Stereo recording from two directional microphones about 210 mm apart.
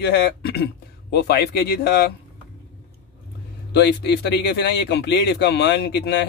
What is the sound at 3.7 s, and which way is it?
A man's voice, 55° left (ahead or behind).